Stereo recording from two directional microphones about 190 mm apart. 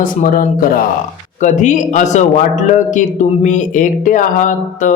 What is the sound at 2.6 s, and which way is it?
Speech, 40° left (ahead or behind).